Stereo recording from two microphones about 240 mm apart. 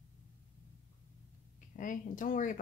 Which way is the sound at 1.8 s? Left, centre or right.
Left.